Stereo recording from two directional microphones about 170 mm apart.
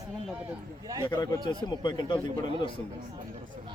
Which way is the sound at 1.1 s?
20° left (ahead or behind).